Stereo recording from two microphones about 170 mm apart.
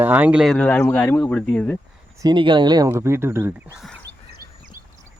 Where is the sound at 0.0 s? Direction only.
10° right (ahead or behind); by 1.8 s 5° left (ahead or behind).